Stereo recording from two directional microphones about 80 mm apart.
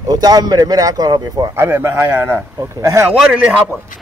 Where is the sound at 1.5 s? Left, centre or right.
Right.